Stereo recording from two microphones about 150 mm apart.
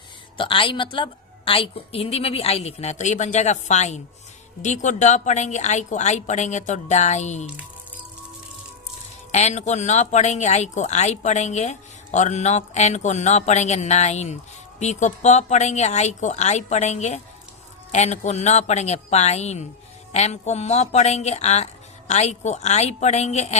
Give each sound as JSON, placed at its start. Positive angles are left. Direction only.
{"t": 0.3, "sound": "a woman's voice", "side_deg": 35}
{"t": 9.3, "sound": "speech", "side_deg": 50}